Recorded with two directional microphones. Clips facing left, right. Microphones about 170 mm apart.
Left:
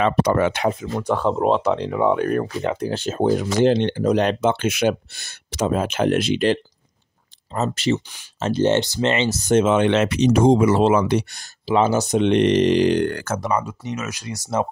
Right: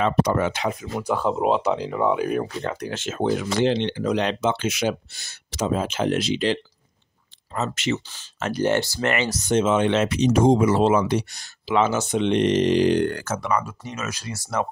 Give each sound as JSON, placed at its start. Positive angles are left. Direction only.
{"t": 0.0, "sound": "speech", "side_deg": 70}
{"t": 0.9, "sound": "speech", "side_deg": -5}
{"t": 2.6, "sound": "speech", "side_deg": 25}
{"t": 7.5, "sound": "speech", "side_deg": 35}
{"t": 9.5, "sound": "speech", "side_deg": 60}
{"t": 11.6, "sound": "speech", "side_deg": 35}
{"t": 12.2, "sound": "speech", "side_deg": 65}
{"t": 13.5, "sound": "speech", "side_deg": 20}